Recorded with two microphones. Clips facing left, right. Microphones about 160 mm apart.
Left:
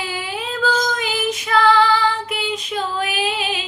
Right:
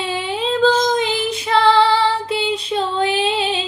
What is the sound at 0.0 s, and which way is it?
Child singing, 25° right (ahead or behind).